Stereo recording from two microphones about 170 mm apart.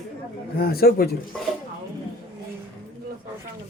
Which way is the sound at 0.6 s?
65° left (ahead or behind).